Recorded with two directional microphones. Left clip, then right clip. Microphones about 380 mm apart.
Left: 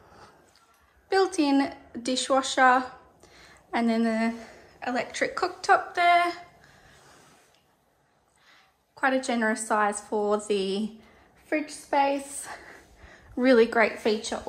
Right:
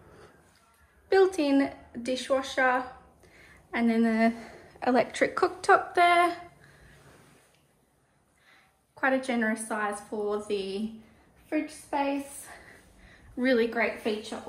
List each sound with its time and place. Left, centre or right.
1.0 s speech: centre
8.5 s a woman's voice: centre
11.9 s a woman's voice: left